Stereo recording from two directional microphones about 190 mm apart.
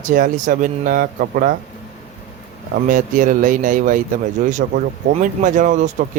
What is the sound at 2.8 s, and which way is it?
Speech, 45° right (ahead or behind).